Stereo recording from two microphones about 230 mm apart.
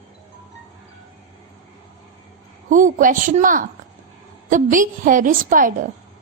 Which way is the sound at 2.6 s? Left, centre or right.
Right.